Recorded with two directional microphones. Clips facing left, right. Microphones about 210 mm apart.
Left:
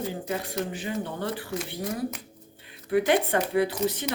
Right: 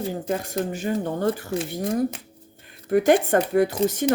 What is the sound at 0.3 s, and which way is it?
Speech, 45° right (ahead or behind).